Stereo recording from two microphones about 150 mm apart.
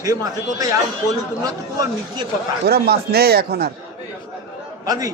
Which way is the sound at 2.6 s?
90° right.